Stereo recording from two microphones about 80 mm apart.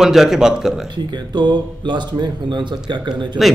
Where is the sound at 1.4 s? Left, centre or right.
Right.